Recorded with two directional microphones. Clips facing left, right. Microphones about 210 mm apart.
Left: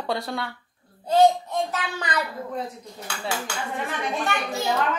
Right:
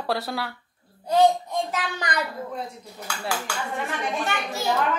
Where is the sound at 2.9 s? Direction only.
25° left (ahead or behind).